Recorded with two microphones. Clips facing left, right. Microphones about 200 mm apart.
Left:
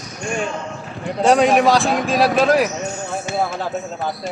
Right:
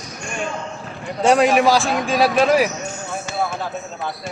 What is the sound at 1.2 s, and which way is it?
A man's voice, centre (ahead or behind).